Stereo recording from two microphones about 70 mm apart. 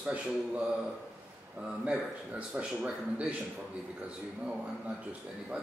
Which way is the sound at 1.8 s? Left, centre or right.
Centre.